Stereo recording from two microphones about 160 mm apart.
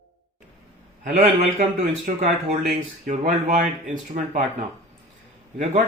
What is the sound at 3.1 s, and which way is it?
Speech, 55° right (ahead or behind).